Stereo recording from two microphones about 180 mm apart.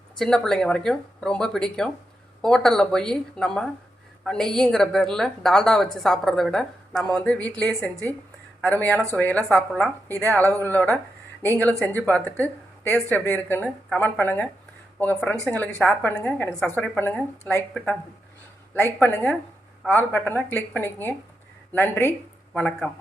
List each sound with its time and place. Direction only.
0.2 s a woman's voice: 5° left (ahead or behind)
11.7 s speech: 15° right (ahead or behind)
12.0 s a woman's voice: 10° left (ahead or behind)